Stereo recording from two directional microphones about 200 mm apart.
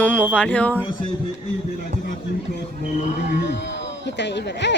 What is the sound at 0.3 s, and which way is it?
Insect, 5° left (ahead or behind).